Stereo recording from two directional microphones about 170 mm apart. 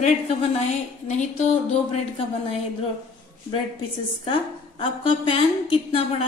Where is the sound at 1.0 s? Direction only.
45° left (ahead or behind).